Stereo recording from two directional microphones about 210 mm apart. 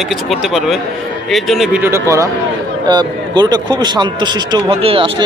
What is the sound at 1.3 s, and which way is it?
A man's voice, centre (ahead or behind).